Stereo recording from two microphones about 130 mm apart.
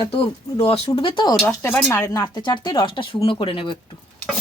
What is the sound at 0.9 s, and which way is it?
Frying, 40° left (ahead or behind).